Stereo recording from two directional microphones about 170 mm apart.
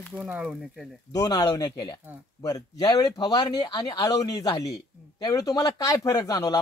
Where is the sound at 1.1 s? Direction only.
25° left (ahead or behind).